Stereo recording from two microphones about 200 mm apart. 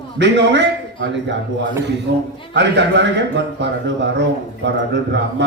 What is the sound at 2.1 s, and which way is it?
A man's voice, 60° right (ahead or behind).